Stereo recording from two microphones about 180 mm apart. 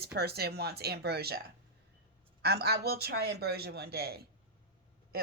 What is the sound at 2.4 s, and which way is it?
A woman's voice, 60° right (ahead or behind).